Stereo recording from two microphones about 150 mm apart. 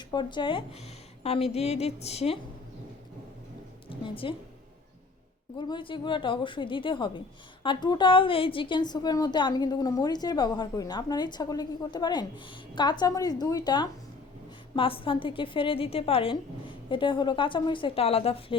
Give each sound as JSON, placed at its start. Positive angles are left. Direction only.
{"t": 0.1, "sound": "a woman's voice", "side_deg": 30}
{"t": 3.8, "sound": "a woman's voice", "side_deg": 35}
{"t": 5.5, "sound": "a woman's voice", "side_deg": 30}